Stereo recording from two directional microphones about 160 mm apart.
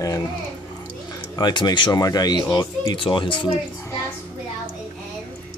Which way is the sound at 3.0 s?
30° left (ahead or behind).